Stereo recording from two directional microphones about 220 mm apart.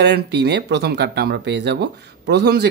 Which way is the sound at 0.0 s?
50° right (ahead or behind).